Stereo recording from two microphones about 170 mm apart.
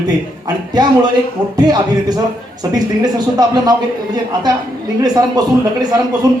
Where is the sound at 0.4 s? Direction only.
25° right (ahead or behind).